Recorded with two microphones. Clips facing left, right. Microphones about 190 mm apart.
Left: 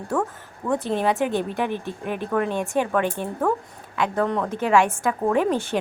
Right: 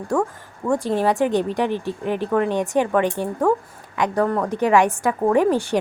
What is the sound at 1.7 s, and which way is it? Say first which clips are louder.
Speech: right 4 dB; 15° left (ahead or behind).